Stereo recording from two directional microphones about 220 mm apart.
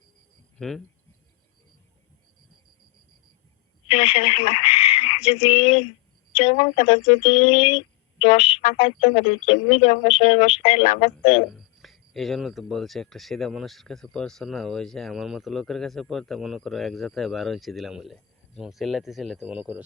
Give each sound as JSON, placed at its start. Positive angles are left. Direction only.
{"t": 0.6, "sound": "speech", "side_deg": 0}
{"t": 3.8, "sound": "speech", "side_deg": 25}
{"t": 11.5, "sound": "speech", "side_deg": 0}